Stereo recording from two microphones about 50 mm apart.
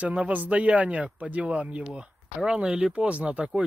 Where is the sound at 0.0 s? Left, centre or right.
Right.